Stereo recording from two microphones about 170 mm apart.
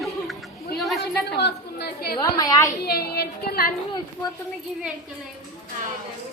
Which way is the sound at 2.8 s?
65° left (ahead or behind).